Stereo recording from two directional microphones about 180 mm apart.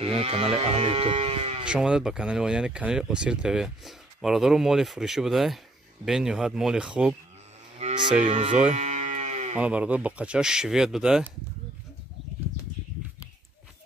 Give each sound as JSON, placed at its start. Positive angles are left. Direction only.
{"t": 0.0, "sound": "speech", "side_deg": -35}
{"t": 1.6, "sound": "speech", "side_deg": -5}
{"t": 7.8, "sound": "moo", "side_deg": -40}
{"t": 8.2, "sound": "speech", "side_deg": -40}
{"t": 8.7, "sound": "moo", "side_deg": -40}
{"t": 9.6, "sound": "speech", "side_deg": -5}